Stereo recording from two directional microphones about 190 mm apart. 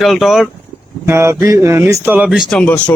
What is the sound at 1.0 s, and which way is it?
Speech, 15° right (ahead or behind).